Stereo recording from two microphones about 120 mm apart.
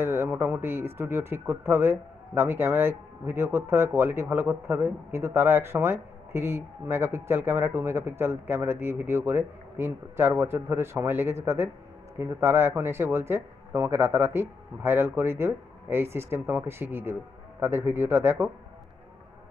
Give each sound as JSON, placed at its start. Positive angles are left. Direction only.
{"t": 0.0, "sound": "speech", "side_deg": -20}